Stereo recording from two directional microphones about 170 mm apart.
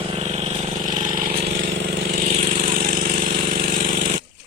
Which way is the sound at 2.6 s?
55° right (ahead or behind).